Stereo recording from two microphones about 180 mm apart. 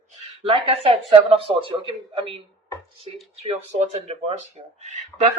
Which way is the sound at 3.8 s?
35° right (ahead or behind).